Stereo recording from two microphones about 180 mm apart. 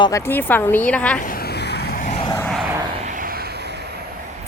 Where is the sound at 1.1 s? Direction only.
50° left (ahead or behind).